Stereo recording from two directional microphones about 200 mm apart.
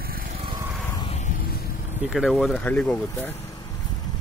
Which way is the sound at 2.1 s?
Centre (ahead or behind).